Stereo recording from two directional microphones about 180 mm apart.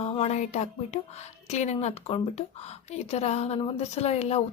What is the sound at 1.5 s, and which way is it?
A woman's voice, 40° left (ahead or behind).